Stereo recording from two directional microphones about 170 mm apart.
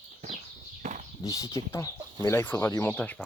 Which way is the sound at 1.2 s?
20° left (ahead or behind).